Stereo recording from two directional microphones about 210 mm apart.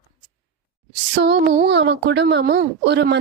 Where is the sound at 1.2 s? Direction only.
55° right (ahead or behind).